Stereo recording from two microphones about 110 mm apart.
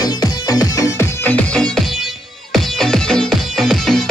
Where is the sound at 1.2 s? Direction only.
10° left (ahead or behind).